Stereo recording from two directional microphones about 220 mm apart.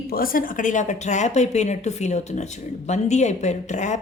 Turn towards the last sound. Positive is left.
turn(degrees=35)  # may be behind; listen again after turning